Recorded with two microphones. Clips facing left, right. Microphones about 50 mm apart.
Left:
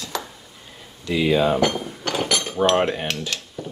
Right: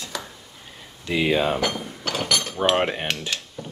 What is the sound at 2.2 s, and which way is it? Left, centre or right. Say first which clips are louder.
Cutlery: left 1 dB; centre.